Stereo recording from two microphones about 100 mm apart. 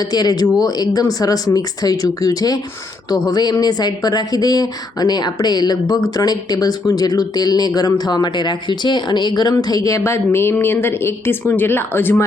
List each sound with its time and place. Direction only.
0.0 s speech: 40° left (ahead or behind); by 12.2 s 20° left (ahead or behind)